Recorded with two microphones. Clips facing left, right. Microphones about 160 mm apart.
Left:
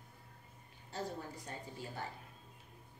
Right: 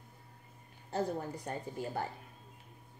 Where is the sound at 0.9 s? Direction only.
50° right (ahead or behind).